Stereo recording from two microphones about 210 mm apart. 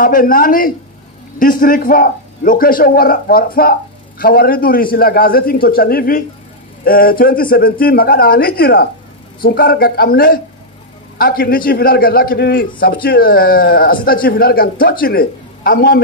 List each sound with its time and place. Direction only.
0.0 s a man's voice: 40° left (ahead or behind)